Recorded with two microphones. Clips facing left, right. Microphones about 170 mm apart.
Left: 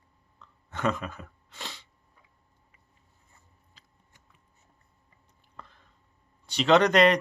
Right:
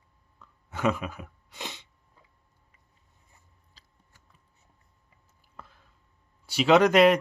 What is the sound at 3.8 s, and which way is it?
Scissors, 35° right (ahead or behind).